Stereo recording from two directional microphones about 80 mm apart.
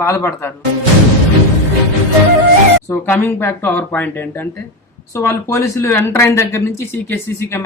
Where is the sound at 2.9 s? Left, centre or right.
Left.